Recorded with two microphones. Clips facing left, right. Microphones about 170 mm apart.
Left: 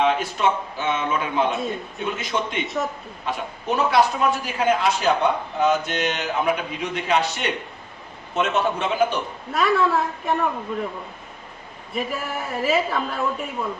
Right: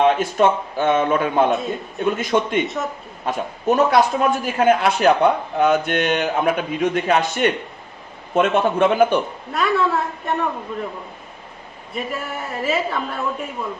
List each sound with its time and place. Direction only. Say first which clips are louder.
0.0 s a man's voice: right 5 dB; 45° right (ahead or behind)
2.6 s speech: even; centre (ahead or behind)
3.2 s a man's voice: right 6 dB; 45° right (ahead or behind)
9.5 s speech: even; centre (ahead or behind)
11.9 s speech: even; centre (ahead or behind)